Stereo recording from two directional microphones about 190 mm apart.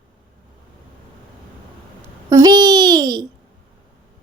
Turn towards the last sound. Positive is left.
turn(degrees=-20)  # may be behind; listen again after turning